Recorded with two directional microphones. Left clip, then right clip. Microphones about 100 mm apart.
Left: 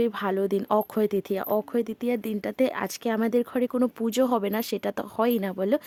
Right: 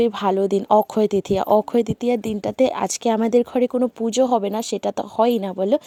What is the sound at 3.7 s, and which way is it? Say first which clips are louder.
A woman's voice: right 5 dB; 10° right (ahead or behind).